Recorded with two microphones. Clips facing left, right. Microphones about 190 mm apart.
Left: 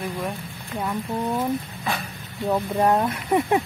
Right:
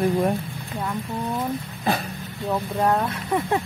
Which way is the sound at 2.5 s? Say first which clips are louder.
Left 2 dB; 10° left (ahead or behind).